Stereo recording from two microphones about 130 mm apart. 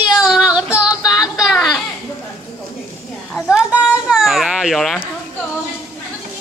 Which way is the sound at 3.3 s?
5° right (ahead or behind).